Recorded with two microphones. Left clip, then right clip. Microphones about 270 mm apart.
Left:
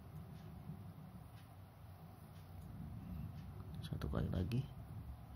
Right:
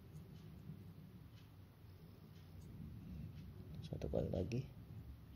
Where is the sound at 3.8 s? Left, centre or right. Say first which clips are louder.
Right 4 dB; left.